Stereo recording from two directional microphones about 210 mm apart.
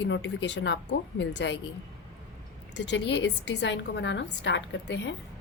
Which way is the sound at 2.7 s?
55° left (ahead or behind).